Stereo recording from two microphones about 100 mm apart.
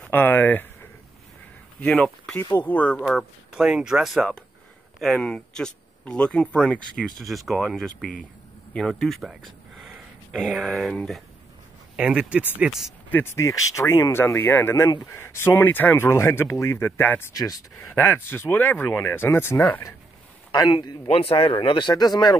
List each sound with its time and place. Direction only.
0.0 s speech: 20° left (ahead or behind)
1.9 s speech: 5° left (ahead or behind)
2.6 s speech: 15° left (ahead or behind)
3.0 s speech: 5° left (ahead or behind)
3.5 s speech: 10° right (ahead or behind)
12.0 s speech: 10° right (ahead or behind)
13.1 s speech: 25° left (ahead or behind)
17.3 s speech: 35° left (ahead or behind)
17.7 s speech: 20° left (ahead or behind)
20.5 s a man's voice: 45° left (ahead or behind)
21.1 s speech: 65° left (ahead or behind); by 22.4 s 40° left (ahead or behind)